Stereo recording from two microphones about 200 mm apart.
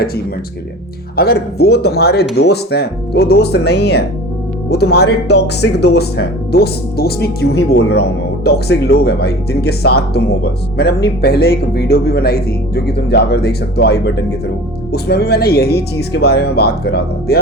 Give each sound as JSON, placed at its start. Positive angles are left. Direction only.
{"t": 1.1, "sound": "speech", "side_deg": 50}